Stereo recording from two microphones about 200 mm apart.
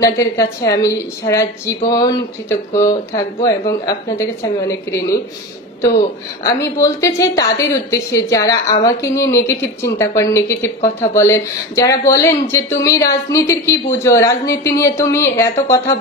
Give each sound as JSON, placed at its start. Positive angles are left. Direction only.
{"t": 0.0, "sound": "a woman's voice", "side_deg": 15}
{"t": 6.4, "sound": "a woman's voice", "side_deg": 15}